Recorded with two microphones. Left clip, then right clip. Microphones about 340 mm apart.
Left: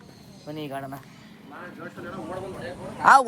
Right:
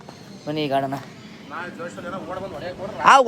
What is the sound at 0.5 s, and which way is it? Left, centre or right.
Speech, right.